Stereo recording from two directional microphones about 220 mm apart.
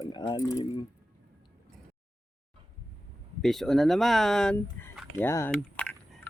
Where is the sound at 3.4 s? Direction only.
Centre (ahead or behind).